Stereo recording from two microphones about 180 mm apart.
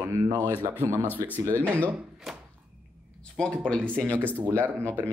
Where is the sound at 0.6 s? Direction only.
15° right (ahead or behind).